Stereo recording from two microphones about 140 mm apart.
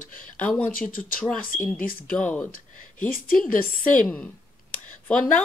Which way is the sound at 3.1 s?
85° left.